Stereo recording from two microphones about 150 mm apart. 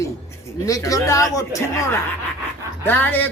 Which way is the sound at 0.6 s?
20° left (ahead or behind).